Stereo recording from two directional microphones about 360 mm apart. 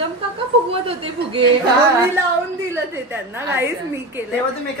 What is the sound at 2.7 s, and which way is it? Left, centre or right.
A woman's voice, centre.